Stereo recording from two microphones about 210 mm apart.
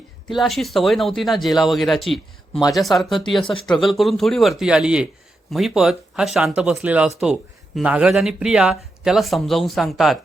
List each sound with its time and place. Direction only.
0.3 s speech: centre (ahead or behind)
2.5 s speech: 20° left (ahead or behind)
2.7 s speech: centre (ahead or behind)